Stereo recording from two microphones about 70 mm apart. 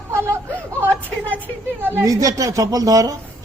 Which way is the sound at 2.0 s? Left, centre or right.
Right.